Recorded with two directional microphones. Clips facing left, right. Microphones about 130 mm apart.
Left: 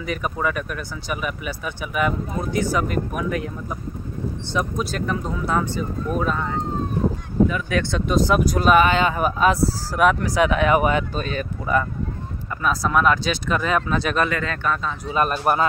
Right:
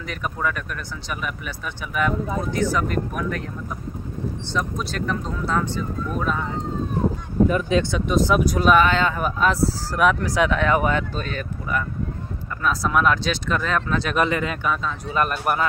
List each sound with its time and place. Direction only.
0.0 s speech: 5° left (ahead or behind)
4.5 s speech: 10° left (ahead or behind)
7.9 s speech: centre (ahead or behind); by 11.4 s 15° left (ahead or behind)
12.6 s speech: centre (ahead or behind)
14.1 s speech: 20° right (ahead or behind)
15.1 s speech: 25° left (ahead or behind)